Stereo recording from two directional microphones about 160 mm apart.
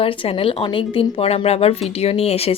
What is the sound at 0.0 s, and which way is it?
Speech, 35° left (ahead or behind).